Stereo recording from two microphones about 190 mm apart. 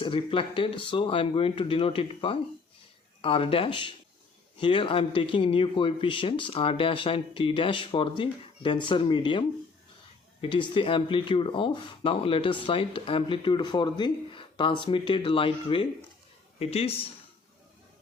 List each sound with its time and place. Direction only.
0.0 s speech: 25° left (ahead or behind)
10.4 s speech: 25° left (ahead or behind)